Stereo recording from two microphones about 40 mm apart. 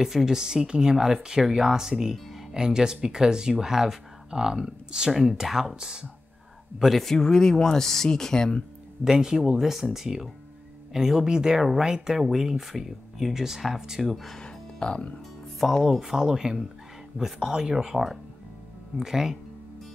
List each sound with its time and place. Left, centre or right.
0.0 s speech: centre
2.1 s music: centre
2.5 s speech: centre
5.1 s speech: centre
5.8 s speech: right
7.0 s speech: centre
9.0 s speech: centre
14.1 s speech: centre
14.4 s music: left
15.8 s speech: centre